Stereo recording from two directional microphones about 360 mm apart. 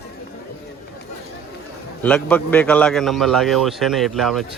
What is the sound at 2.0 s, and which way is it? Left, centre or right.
A man's voice, centre.